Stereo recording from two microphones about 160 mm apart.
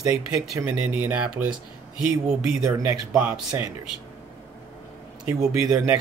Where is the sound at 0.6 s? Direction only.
10° right (ahead or behind).